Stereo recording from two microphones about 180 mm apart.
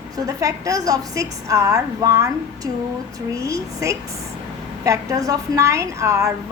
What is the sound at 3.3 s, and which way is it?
A woman's voice, 15° right (ahead or behind).